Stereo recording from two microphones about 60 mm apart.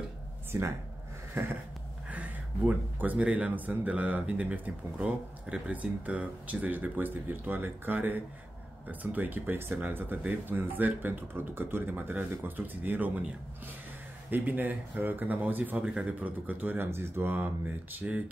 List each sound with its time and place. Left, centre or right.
0.5 s speech: right
1.4 s a sound: right
2.0 s speech: right
14.3 s speech: right